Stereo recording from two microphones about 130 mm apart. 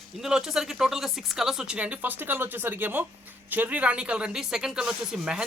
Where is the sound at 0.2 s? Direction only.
5° right (ahead or behind).